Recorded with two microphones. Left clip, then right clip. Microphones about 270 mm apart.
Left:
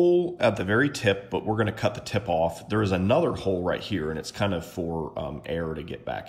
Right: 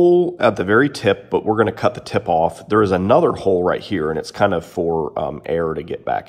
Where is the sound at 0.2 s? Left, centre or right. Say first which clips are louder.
Right 8 dB; centre.